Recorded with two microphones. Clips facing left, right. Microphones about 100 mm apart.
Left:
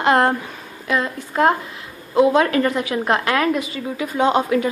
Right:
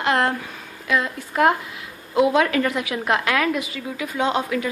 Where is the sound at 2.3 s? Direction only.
35° left (ahead or behind).